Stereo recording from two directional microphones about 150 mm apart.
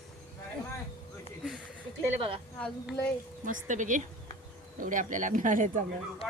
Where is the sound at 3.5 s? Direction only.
55° right (ahead or behind).